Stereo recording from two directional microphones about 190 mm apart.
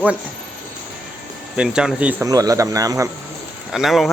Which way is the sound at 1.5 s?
5° right (ahead or behind).